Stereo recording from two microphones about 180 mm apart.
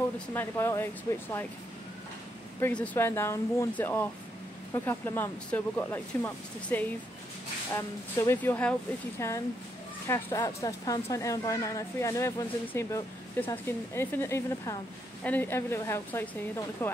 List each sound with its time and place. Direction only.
0.3 s a woman's voice: 15° left (ahead or behind)
2.6 s a woman's voice: 10° left (ahead or behind)